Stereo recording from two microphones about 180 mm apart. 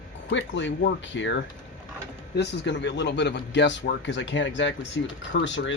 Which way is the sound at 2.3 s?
75° left (ahead or behind).